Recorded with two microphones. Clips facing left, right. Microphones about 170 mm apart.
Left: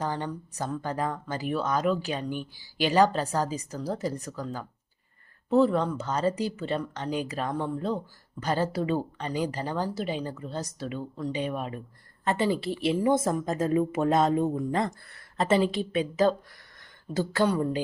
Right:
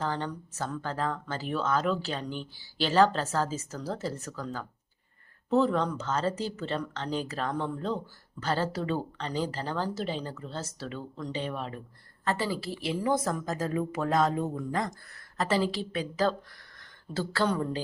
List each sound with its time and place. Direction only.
0.0 s a woman's voice: 10° left (ahead or behind)